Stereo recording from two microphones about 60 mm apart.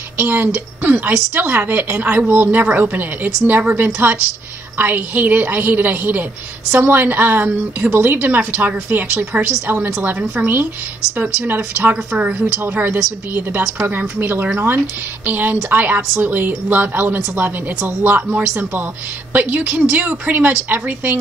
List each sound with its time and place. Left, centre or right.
0.2 s a woman's voice: right
10.4 s a woman's voice: right